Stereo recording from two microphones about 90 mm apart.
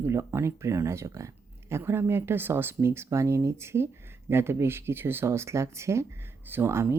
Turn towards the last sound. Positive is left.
turn(degrees=-30)  # may be behind; listen again after turning